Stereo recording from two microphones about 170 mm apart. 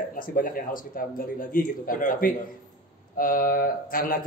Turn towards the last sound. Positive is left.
turn(degrees=55)  # may be behind; listen again after turning